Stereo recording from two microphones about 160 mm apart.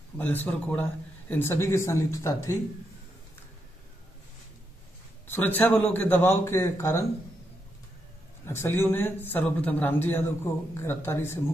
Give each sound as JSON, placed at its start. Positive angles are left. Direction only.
{"t": 0.2, "sound": "a man's voice", "side_deg": 10}
{"t": 5.2, "sound": "a man's voice", "side_deg": 10}
{"t": 8.5, "sound": "a man's voice", "side_deg": 15}